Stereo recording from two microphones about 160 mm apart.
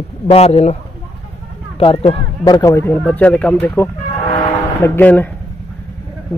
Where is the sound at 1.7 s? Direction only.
35° left (ahead or behind).